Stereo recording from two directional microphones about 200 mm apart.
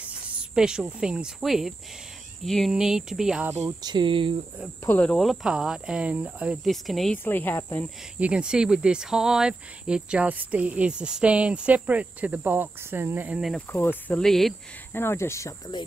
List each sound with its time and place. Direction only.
0.0 s cricket: 5° right (ahead or behind)
2.4 s speech: centre (ahead or behind)
3.5 s speech: 25° right (ahead or behind)
4.8 s speech: 5° left (ahead or behind)
8.2 s speech: 5° right (ahead or behind)
13.7 s speech: 10° left (ahead or behind)
15.0 s speech: 10° left (ahead or behind)